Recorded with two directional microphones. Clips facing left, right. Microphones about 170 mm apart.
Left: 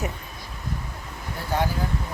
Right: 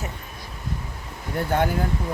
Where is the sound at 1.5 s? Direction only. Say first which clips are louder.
Right 3 dB; 55° right (ahead or behind).